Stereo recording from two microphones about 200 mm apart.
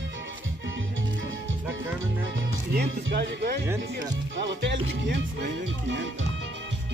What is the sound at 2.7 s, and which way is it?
Speech, 50° right (ahead or behind).